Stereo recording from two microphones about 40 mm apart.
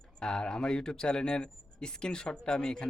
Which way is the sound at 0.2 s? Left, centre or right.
Centre.